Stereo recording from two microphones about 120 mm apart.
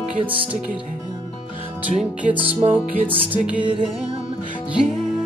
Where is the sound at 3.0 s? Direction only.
45° right (ahead or behind).